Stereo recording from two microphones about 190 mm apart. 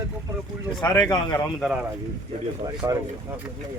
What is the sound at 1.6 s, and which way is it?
Speech, 5° right (ahead or behind).